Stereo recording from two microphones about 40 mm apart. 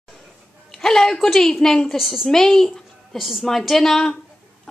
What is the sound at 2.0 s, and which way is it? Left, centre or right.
Speech, centre.